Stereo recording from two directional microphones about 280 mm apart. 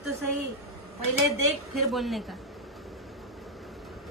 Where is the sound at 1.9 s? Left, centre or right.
Centre.